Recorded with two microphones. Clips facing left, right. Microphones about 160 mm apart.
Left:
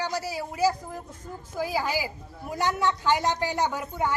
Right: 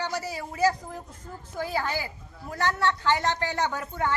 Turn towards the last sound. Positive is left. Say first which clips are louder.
# left 1 dB
turn(degrees=10)  # may be behind; listen again after turning